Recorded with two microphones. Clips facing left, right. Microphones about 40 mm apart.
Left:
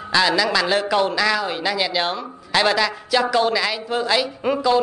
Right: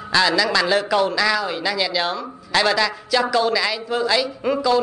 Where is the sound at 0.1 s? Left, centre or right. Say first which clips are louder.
Even; centre.